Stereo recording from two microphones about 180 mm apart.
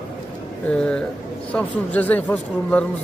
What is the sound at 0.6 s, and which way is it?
Speech, 5° left (ahead or behind).